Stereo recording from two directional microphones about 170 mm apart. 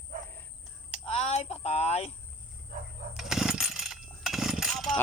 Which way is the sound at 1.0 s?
35° left (ahead or behind).